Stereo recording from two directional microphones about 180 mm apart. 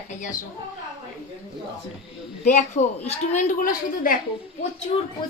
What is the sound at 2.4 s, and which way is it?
A woman's voice, 40° left (ahead or behind).